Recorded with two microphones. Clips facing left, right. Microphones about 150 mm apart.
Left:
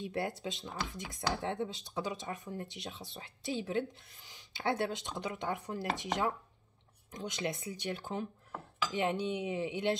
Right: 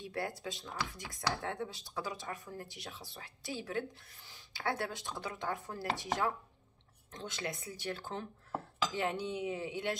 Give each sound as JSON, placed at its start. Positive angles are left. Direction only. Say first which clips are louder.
{"t": 0.0, "sound": "speech", "louder": "left 3 dB", "side_deg": 20}